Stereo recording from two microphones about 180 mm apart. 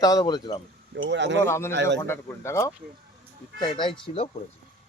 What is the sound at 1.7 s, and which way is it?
Speech, 75° right (ahead or behind).